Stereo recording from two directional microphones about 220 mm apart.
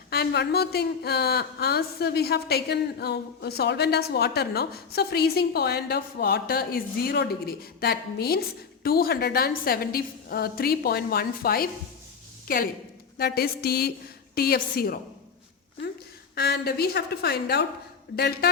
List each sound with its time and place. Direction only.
0.1 s a woman's voice: 45° left (ahead or behind)
16.3 s a woman's voice: 45° left (ahead or behind)